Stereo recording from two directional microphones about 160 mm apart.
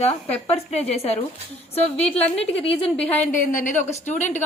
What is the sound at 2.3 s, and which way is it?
Speech, 40° left (ahead or behind).